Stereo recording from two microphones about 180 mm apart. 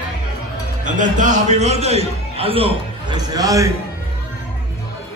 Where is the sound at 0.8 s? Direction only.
45° right (ahead or behind); by 3.7 s 20° right (ahead or behind).